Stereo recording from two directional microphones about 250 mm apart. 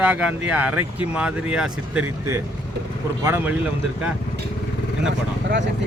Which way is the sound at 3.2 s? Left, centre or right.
Centre.